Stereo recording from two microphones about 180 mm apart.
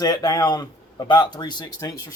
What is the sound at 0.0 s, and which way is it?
Speech, 20° left (ahead or behind).